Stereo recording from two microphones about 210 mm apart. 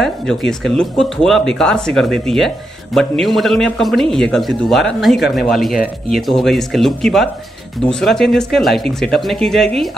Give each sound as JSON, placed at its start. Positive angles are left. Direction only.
{"t": 0.0, "sound": "speech", "side_deg": 0}